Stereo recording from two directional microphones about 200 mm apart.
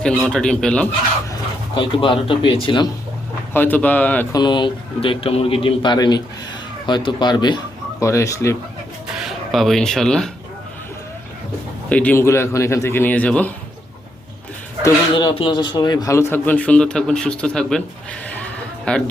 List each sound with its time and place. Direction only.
0.0 s a man's voice: 5° left (ahead or behind)
1.3 s speech: 25° left (ahead or behind)
3.5 s a man's voice: 10° left (ahead or behind)
4.4 s a man's voice: 20° left (ahead or behind)
9.1 s speech: centre (ahead or behind)
11.9 s a man's voice: 5° left (ahead or behind)
14.8 s a man's voice: 20° left (ahead or behind)
18.9 s a man's voice: 5° left (ahead or behind)